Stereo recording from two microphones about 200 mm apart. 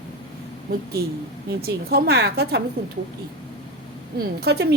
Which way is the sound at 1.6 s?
50° right (ahead or behind).